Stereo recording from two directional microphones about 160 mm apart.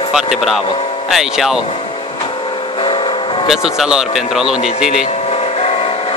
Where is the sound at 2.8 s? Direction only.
35° left (ahead or behind).